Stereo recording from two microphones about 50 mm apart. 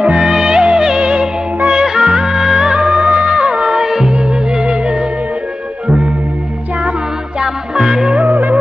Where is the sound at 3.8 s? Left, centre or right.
Centre.